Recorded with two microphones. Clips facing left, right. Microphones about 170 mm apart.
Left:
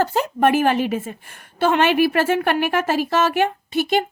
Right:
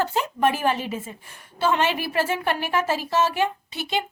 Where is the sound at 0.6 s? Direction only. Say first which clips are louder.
Left 6 dB; 70° left (ahead or behind).